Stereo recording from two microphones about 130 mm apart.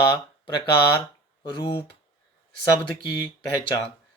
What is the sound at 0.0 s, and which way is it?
Speech, 35° left (ahead or behind).